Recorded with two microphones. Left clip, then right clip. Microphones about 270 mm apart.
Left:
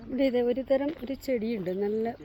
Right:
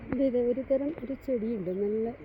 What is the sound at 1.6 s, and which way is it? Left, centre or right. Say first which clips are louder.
Speech: left 1 dB; left.